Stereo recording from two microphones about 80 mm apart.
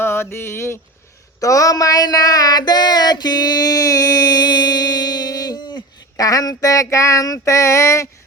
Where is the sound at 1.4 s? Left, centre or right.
Left.